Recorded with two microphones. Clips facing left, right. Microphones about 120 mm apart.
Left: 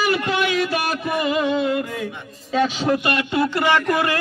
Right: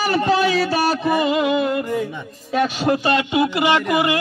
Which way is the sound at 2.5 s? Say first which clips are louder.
Right 1 dB; 10° right (ahead or behind).